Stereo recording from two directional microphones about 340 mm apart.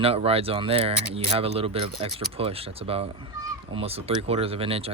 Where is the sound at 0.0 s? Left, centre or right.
Centre.